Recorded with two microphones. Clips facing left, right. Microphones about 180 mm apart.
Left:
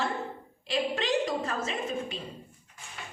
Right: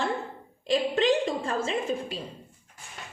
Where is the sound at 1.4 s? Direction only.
30° right (ahead or behind).